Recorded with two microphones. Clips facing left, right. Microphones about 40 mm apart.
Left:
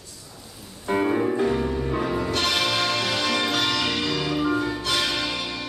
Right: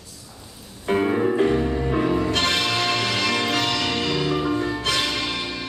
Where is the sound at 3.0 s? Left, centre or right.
Right.